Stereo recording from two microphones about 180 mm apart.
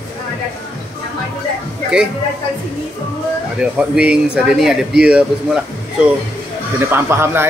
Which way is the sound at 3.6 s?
5° right (ahead or behind).